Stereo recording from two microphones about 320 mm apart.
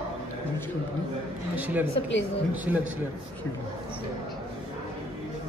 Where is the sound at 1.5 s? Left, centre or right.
Centre.